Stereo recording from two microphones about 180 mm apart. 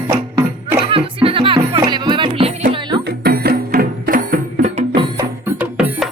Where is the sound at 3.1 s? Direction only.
60° right (ahead or behind); by 5.0 s 40° right (ahead or behind).